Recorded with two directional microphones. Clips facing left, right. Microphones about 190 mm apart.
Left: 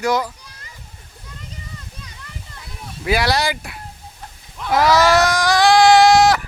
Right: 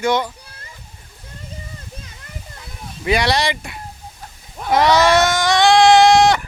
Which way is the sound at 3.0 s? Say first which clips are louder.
Right 1 dB; centre (ahead or behind).